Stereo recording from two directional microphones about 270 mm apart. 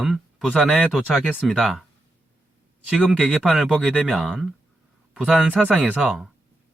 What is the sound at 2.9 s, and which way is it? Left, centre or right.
Speech, centre.